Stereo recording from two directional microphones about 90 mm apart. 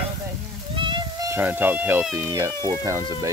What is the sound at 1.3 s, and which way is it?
Speech, 20° right (ahead or behind).